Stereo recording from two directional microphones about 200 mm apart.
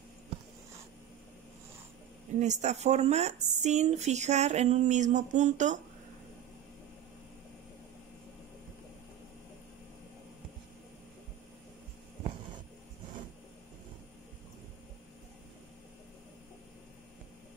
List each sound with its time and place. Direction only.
2.4 s speech: 35° right (ahead or behind)